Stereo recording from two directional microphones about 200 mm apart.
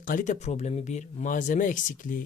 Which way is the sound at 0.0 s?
40° left (ahead or behind).